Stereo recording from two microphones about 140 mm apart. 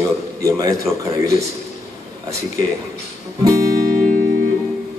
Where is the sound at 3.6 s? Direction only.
90° right.